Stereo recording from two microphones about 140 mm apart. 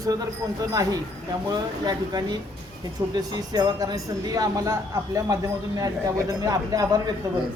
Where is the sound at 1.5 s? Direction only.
30° right (ahead or behind).